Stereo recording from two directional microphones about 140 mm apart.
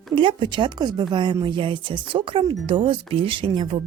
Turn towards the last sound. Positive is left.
turn(degrees=-40)  # may be behind; listen again after turning